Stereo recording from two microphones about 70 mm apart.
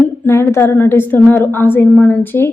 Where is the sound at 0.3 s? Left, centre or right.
Left.